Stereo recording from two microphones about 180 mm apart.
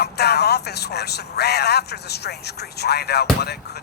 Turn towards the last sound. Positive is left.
turn(degrees=65)  # may be behind; listen again after turning